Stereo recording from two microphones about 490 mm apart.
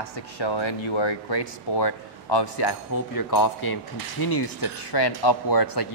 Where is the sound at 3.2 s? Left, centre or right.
Left.